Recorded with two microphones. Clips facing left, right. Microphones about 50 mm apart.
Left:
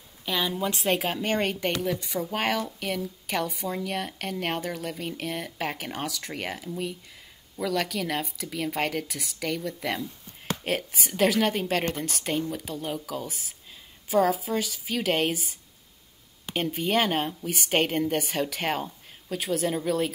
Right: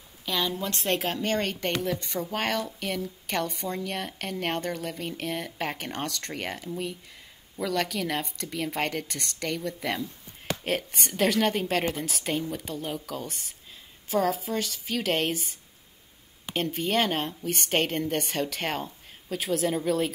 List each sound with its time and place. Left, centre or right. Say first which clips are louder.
0.2 s a woman's voice: left 1 dB; centre
16.5 s speech: left 1 dB; centre